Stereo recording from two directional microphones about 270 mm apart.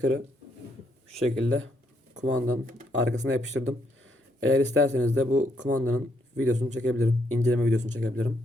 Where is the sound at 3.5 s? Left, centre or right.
Right.